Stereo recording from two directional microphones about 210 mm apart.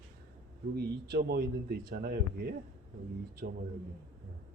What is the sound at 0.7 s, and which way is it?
Speech, 50° right (ahead or behind).